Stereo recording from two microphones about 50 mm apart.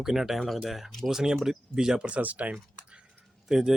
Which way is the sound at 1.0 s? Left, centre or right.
Centre.